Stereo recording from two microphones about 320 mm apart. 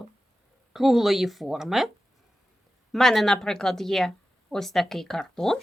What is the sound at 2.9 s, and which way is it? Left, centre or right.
A woman's voice, centre.